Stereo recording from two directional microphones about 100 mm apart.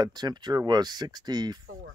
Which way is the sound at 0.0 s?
45° right (ahead or behind).